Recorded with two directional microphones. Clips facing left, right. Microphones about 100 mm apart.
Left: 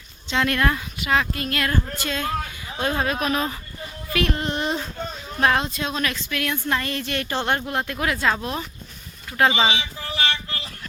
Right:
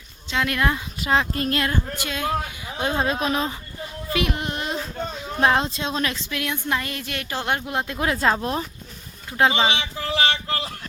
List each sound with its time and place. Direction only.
0.3 s speech: 5° right (ahead or behind)
0.9 s child singing: 30° right (ahead or behind)
1.7 s a woman's voice: 15° right (ahead or behind)
4.1 s a sound: 15° right (ahead or behind)
5.4 s a woman's voice: 25° right (ahead or behind)
9.5 s speech: 5° left (ahead or behind)
9.7 s a sound: 85° right